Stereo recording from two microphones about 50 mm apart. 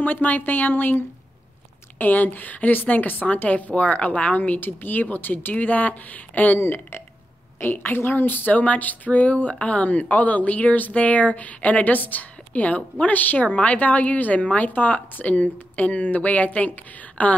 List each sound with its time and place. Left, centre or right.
0.0 s speech: left
6.6 s a woman's voice: left